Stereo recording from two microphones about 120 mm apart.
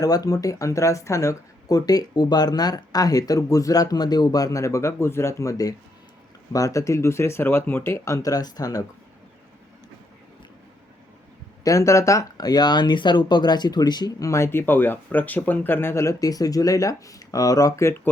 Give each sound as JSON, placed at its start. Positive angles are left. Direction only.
{"t": 0.0, "sound": "speech", "side_deg": 30}
{"t": 11.6, "sound": "speech", "side_deg": 25}